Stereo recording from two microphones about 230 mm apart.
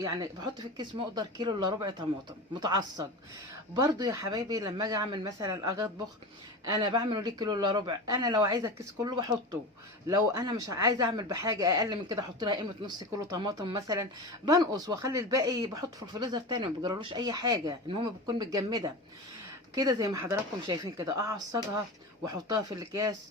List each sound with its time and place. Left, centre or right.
0.0 s speech: centre